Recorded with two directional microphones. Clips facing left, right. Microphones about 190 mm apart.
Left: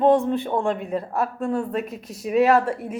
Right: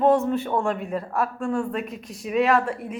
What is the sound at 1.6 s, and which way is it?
Speech, 40° left (ahead or behind).